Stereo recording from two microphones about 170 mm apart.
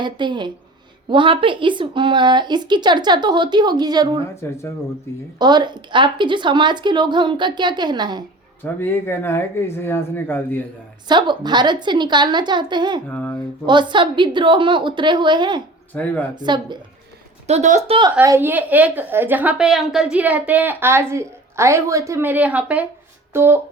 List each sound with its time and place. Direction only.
0.0 s speech: 25° right (ahead or behind)
4.4 s speech: 15° left (ahead or behind)
5.4 s speech: 25° right (ahead or behind)
8.6 s speech: 15° left (ahead or behind)
11.1 s speech: 25° right (ahead or behind)
13.1 s speech: 10° left (ahead or behind)
13.7 s speech: 25° right (ahead or behind)
15.9 s speech: 5° left (ahead or behind)
16.3 s speech: 25° right (ahead or behind)
17.4 s a woman's voice: 40° right (ahead or behind)
18.2 s a woman's voice: 15° right (ahead or behind)